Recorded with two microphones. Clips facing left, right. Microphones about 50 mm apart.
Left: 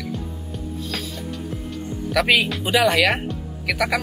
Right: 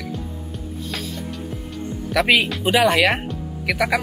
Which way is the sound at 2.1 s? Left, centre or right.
Centre.